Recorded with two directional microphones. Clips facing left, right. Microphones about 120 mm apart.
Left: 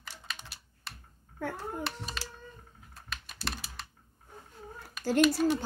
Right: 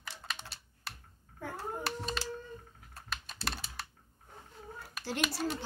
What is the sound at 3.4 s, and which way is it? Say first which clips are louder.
Computer keyboard: even; centre (ahead or behind).